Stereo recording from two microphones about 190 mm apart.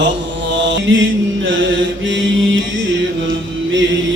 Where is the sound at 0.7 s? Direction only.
90° right.